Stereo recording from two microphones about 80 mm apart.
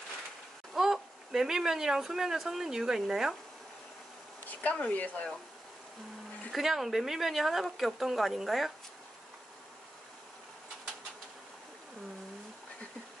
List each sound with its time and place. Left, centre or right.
0.7 s speech: centre
4.5 s speech: centre
6.5 s speech: centre